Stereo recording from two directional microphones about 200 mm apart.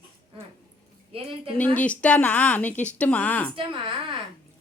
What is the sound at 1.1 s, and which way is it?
Speech, 25° right (ahead or behind).